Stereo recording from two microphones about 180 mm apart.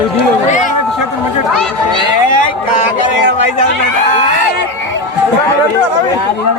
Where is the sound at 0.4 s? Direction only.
45° left (ahead or behind).